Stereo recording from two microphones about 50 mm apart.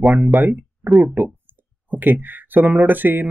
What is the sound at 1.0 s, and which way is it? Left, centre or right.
Speech, right.